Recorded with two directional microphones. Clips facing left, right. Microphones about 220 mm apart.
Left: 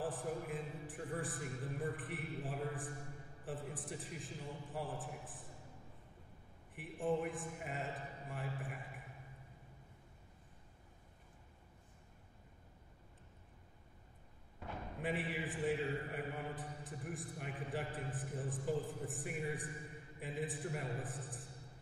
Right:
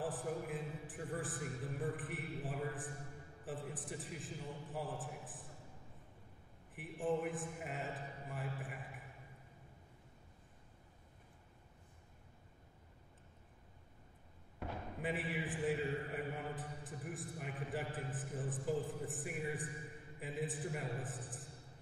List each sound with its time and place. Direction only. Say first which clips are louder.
0.0 s a man's voice: even; centre (ahead or behind)
6.7 s a man's voice: even; centre (ahead or behind)
14.6 s a sound: right 3 dB; 70° right (ahead or behind)
15.0 s a man's voice: left 1 dB; centre (ahead or behind)